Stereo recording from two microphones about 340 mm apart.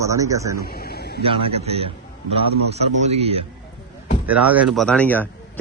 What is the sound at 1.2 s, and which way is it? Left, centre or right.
Speech, centre.